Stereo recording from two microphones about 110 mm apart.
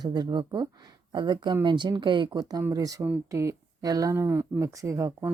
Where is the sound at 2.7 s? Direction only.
35° right (ahead or behind).